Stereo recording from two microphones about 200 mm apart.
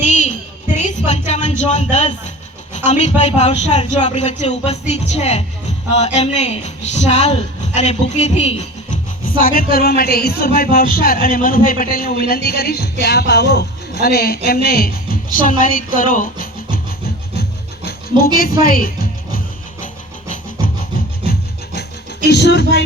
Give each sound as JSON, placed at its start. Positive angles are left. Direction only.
{"t": 0.0, "sound": "a sound", "side_deg": 35}
{"t": 0.8, "sound": "music", "side_deg": 35}
{"t": 1.3, "sound": "a woman's voice", "side_deg": 35}
{"t": 18.1, "sound": "speech", "side_deg": -20}
{"t": 18.6, "sound": "speech", "side_deg": 45}
{"t": 20.6, "sound": "rub", "side_deg": -20}
{"t": 22.3, "sound": "speech", "side_deg": 55}